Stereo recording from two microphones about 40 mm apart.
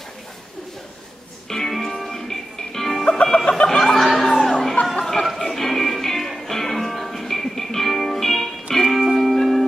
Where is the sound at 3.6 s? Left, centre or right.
Centre.